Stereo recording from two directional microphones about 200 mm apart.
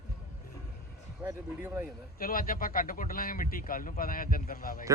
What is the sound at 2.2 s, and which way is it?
Speech, 45° left (ahead or behind).